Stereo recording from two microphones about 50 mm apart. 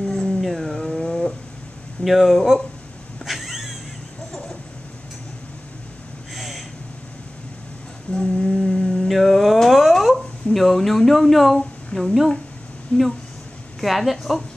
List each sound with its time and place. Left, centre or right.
0.0 s howl: centre
2.0 s a woman's voice: centre
3.3 s cat: centre
4.3 s a sound: centre
6.3 s a sound: centre
8.1 s humming: centre
12.9 s speech: centre
13.7 s a woman's voice: centre